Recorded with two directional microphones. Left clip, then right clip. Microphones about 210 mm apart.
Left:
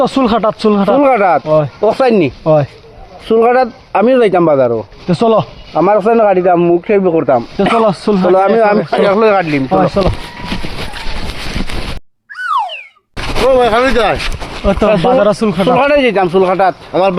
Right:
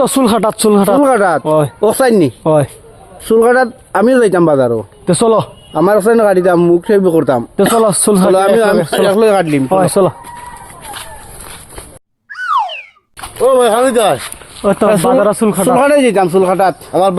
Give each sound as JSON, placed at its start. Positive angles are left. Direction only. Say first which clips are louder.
{"t": 0.0, "sound": "speech", "louder": "even", "side_deg": -55}
{"t": 0.9, "sound": "speech", "louder": "left 1 dB", "side_deg": -30}
{"t": 1.5, "sound": "speech", "louder": "even", "side_deg": -60}
{"t": 1.8, "sound": "speech", "louder": "even", "side_deg": -35}
{"t": 2.4, "sound": "speech", "louder": "left 1 dB", "side_deg": -60}
{"t": 3.2, "sound": "speech", "louder": "even", "side_deg": -35}
{"t": 5.7, "sound": "speech", "louder": "even", "side_deg": -40}
{"t": 8.5, "sound": "speech", "louder": "even", "side_deg": -30}
{"t": 9.7, "sound": "speech", "louder": "even", "side_deg": -60}
{"t": 12.3, "sound": "a sound", "louder": "right 1 dB", "side_deg": 0}
{"t": 13.5, "sound": "speech", "louder": "even", "side_deg": 5}
{"t": 14.6, "sound": "speech", "louder": "even", "side_deg": -30}
{"t": 15.6, "sound": "speech", "louder": "even", "side_deg": -55}
{"t": 16.9, "sound": "speech", "louder": "even", "side_deg": -5}